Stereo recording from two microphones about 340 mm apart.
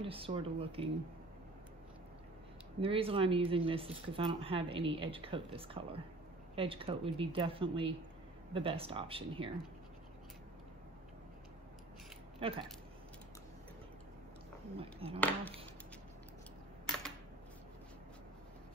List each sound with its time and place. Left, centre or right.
0.0 s speech: centre
2.8 s speech: centre
12.4 s speech: centre
14.8 s speech: centre
15.1 s speech: centre